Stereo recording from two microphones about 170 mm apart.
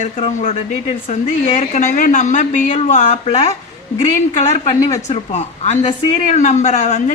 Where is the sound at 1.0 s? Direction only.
35° left (ahead or behind).